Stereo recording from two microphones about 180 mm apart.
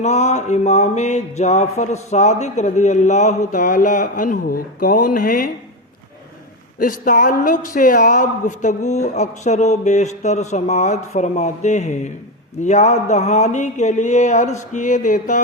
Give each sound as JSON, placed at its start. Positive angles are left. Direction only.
{"t": 0.0, "sound": "mantra", "side_deg": 40}
{"t": 6.7, "sound": "mantra", "side_deg": 50}